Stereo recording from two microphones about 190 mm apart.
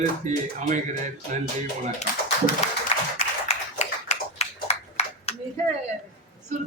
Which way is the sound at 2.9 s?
35° left (ahead or behind).